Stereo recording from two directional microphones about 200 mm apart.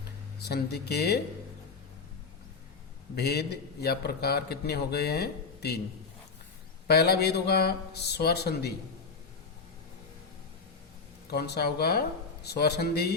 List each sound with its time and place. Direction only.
0.4 s a man's voice: 55° left (ahead or behind)
3.2 s a man's voice: 55° left (ahead or behind)
6.8 s a man's voice: 55° left (ahead or behind)
11.3 s a man's voice: 55° left (ahead or behind)